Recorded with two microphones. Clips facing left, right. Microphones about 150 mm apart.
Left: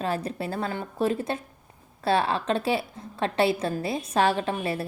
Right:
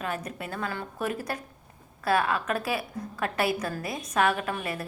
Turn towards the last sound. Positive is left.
turn(degrees=30)  # may be behind; listen again after turning